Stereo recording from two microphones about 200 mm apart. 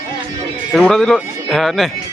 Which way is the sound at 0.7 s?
5° left (ahead or behind).